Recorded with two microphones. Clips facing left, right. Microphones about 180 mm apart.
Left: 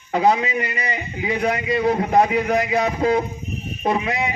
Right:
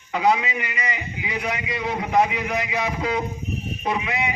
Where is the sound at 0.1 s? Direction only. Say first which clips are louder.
Left 3 dB; 40° left (ahead or behind).